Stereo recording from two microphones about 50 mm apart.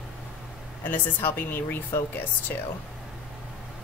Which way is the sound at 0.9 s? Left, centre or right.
Left.